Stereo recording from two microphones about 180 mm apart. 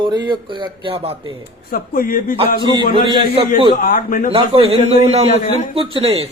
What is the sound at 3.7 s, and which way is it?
Speech, 50° left (ahead or behind).